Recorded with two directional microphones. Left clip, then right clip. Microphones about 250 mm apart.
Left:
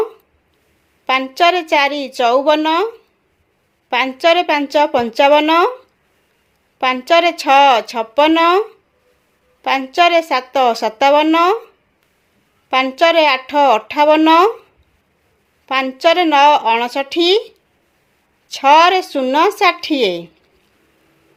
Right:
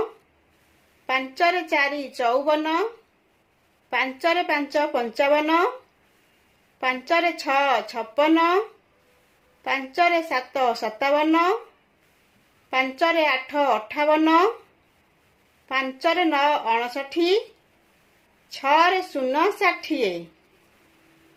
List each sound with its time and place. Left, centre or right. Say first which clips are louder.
1.0 s a woman's voice: left 9 dB; left
3.8 s a woman's voice: left 9 dB; left
6.7 s a woman's voice: left 9 dB; left
12.7 s a woman's voice: left 9 dB; left
15.7 s a woman's voice: left 9 dB; left
18.4 s a woman's voice: left 9 dB; left